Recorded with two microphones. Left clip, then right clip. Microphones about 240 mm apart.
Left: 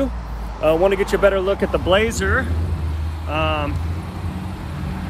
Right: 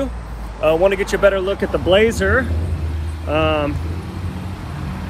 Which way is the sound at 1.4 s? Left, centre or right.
Left.